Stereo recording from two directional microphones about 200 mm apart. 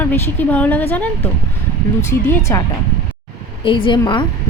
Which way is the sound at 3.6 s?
25° left (ahead or behind).